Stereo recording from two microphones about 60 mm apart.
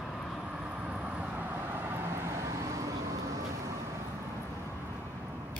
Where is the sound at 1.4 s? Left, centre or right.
Right.